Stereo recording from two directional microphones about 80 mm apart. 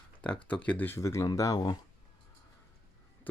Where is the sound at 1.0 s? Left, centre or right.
Left.